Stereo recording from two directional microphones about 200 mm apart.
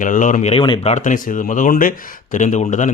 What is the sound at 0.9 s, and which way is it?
Speech, 40° left (ahead or behind).